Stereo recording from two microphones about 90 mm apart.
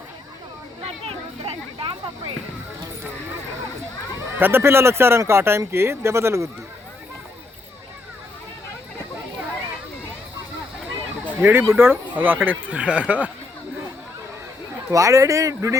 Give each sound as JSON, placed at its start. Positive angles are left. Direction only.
{"t": 0.8, "sound": "a sound", "side_deg": -90}
{"t": 4.4, "sound": "speech", "side_deg": -25}
{"t": 11.3, "sound": "speech", "side_deg": -25}
{"t": 14.8, "sound": "speech", "side_deg": -35}